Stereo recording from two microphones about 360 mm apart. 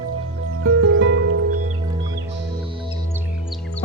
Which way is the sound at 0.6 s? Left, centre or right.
Right.